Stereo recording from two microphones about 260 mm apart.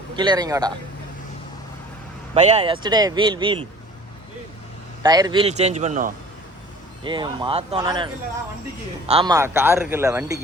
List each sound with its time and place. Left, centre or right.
0.2 s a man's voice: centre
2.3 s speech: right
5.0 s speech: centre
7.0 s a man's voice: centre